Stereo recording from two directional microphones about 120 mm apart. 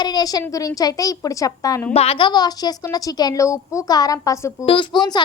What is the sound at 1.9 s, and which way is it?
A woman's voice, 55° left (ahead or behind).